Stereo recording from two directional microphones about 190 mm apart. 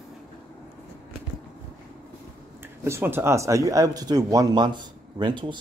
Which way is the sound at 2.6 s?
10° right (ahead or behind).